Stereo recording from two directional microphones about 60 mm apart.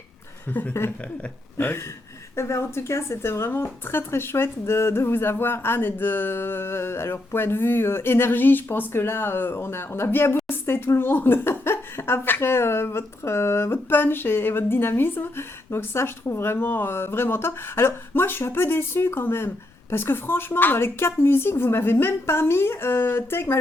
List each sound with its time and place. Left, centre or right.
0.7 s a woman's voice: left
2.3 s a woman's voice: left